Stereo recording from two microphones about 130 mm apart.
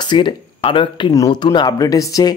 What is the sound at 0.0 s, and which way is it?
Speech, 35° left (ahead or behind).